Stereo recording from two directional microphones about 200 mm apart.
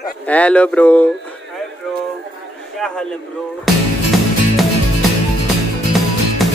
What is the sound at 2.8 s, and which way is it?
Speech, 5° left (ahead or behind).